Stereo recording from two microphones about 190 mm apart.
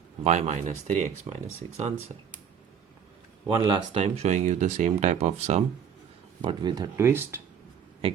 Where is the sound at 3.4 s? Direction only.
25° right (ahead or behind).